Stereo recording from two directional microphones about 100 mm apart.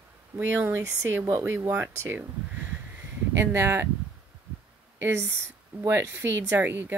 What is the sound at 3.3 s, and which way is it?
Speech, 25° right (ahead or behind).